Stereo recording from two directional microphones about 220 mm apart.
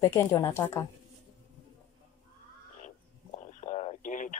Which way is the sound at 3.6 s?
30° left (ahead or behind).